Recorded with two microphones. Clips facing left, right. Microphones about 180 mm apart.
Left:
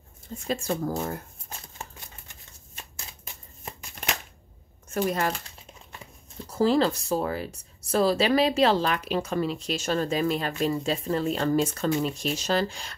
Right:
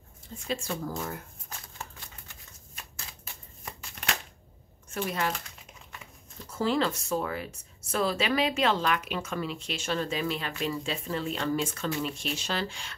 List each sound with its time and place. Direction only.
0.5 s speech: 45° left (ahead or behind)
1.5 s shuffling cards: 25° left (ahead or behind)
4.8 s speech: 40° left (ahead or behind)
6.5 s speech: 35° left (ahead or behind)